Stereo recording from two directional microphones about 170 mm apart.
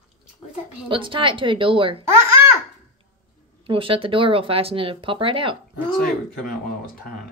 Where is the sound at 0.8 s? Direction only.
30° right (ahead or behind).